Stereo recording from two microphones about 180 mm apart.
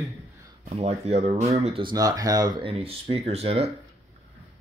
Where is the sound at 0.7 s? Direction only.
35° right (ahead or behind).